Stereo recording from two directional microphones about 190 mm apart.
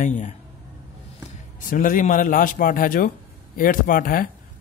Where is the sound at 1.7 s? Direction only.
45° left (ahead or behind).